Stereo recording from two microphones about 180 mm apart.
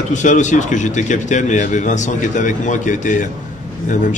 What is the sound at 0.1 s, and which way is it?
A man's voice, 40° left (ahead or behind).